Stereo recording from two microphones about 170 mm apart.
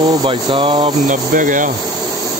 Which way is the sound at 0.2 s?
30° right (ahead or behind).